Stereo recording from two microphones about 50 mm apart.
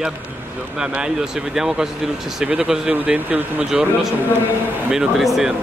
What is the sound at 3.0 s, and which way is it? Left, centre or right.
Speech, right.